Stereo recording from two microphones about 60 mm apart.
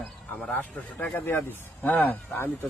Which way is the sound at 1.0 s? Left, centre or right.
Left.